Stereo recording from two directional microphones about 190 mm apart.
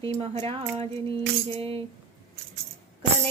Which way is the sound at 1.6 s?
30° right (ahead or behind).